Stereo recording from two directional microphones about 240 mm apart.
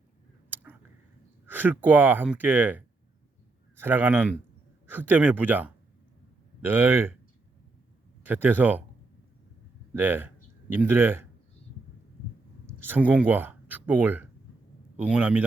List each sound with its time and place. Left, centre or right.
0.5 s a sound: centre
1.5 s speech: centre
8.2 s speech: centre
9.9 s speech: centre
12.9 s speech: centre